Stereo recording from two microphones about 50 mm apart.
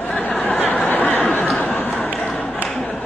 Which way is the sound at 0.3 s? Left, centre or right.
Left.